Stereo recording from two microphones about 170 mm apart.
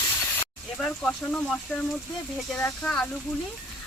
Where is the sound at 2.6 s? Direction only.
5° left (ahead or behind).